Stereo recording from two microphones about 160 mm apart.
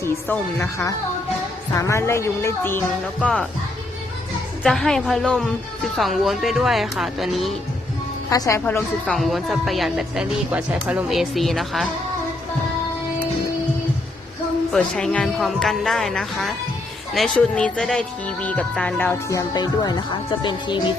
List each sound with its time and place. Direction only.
0.0 s speech: 15° left (ahead or behind)
4.6 s speech: centre (ahead or behind)
8.3 s speech: 20° left (ahead or behind)
9.0 s speech: centre (ahead or behind)
14.7 s speech: 5° left (ahead or behind); by 20.8 s 30° left (ahead or behind)